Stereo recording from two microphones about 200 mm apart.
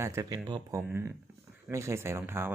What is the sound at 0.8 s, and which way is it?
Speech, 10° right (ahead or behind).